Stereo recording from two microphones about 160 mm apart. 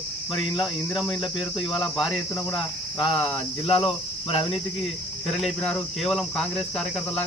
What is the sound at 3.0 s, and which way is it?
Speech, 30° left (ahead or behind).